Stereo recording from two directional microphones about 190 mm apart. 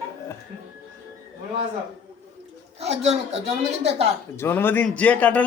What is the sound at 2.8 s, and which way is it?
Speech, 35° right (ahead or behind).